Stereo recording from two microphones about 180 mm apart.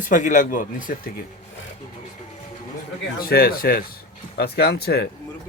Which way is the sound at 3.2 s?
55° left (ahead or behind).